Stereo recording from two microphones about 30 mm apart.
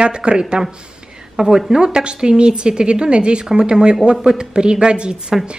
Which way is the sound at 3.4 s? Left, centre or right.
Right.